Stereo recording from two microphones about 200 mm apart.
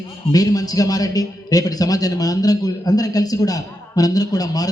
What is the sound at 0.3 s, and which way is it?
A man's voice, 20° left (ahead or behind).